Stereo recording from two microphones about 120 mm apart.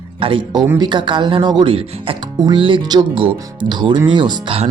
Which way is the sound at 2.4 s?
40° right (ahead or behind).